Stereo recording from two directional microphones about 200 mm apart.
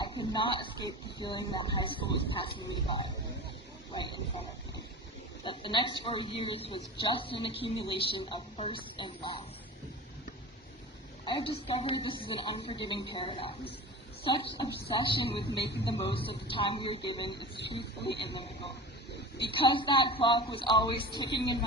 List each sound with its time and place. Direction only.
0.0 s a sound: 25° left (ahead or behind)
1.2 s a man's voice: 20° left (ahead or behind)
11.3 s a man's voice: 25° left (ahead or behind)
18.0 s speech: 60° left (ahead or behind)
19.5 s a man's voice: 25° left (ahead or behind)